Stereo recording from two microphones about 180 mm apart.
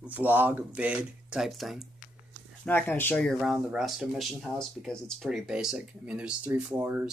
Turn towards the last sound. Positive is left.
turn(degrees=-10)  # may be behind; listen again after turning